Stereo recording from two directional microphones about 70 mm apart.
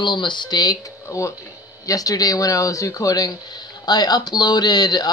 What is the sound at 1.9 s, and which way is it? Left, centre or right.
Speech, left.